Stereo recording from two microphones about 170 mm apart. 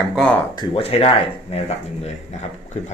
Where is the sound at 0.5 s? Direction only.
30° left (ahead or behind).